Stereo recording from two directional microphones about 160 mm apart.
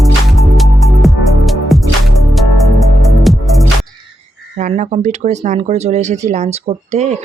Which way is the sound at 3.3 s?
Centre (ahead or behind).